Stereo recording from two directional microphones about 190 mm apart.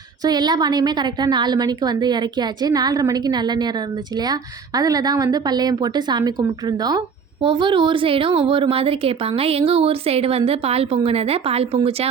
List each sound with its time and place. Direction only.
0.3 s a woman's voice: 20° right (ahead or behind)